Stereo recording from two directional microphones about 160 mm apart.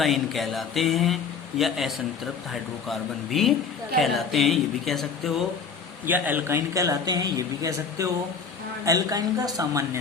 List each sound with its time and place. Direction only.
0.0 s speech: centre (ahead or behind)
6.1 s a man's voice: 10° right (ahead or behind)